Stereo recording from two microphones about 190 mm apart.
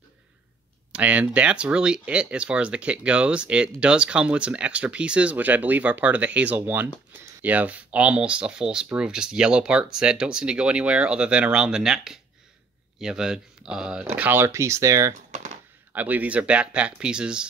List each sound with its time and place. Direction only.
0.9 s speech: 5° right (ahead or behind)